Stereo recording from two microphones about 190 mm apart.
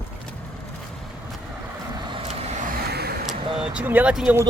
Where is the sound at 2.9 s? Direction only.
55° right (ahead or behind).